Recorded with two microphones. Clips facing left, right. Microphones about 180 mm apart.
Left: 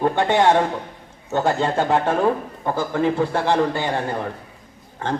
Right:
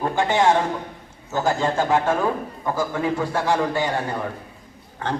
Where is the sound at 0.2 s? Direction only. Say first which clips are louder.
Left 1 dB; 60° left (ahead or behind).